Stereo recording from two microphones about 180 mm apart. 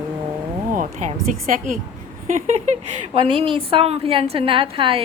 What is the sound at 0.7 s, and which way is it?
A woman's voice, 45° right (ahead or behind).